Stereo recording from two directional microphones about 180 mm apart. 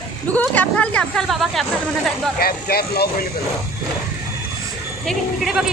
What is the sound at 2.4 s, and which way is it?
Speech, 55° left (ahead or behind).